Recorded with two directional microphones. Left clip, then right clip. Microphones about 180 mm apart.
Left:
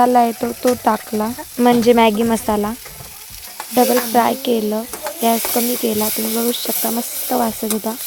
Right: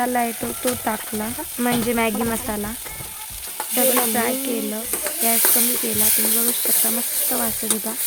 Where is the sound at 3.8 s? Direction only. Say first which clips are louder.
Left 7 dB; 30° left (ahead or behind).